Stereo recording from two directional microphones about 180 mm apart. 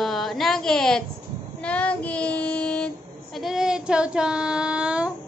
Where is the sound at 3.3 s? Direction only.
Centre (ahead or behind).